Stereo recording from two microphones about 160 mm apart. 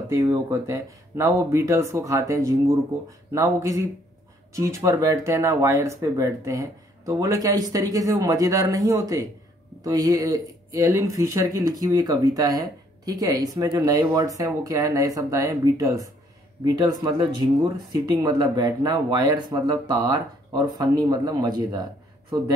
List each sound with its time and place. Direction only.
0.1 s speech: 20° right (ahead or behind)